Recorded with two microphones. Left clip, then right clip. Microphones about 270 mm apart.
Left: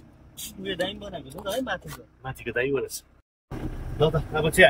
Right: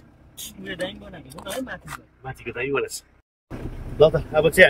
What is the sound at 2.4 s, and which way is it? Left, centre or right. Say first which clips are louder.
Speech: right 1 dB; centre.